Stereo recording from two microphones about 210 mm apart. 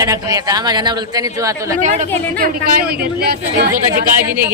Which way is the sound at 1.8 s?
35° right (ahead or behind).